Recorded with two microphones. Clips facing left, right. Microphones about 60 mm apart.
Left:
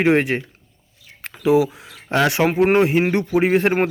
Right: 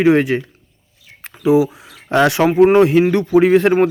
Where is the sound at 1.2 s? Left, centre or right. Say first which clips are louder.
Right 3 dB; left.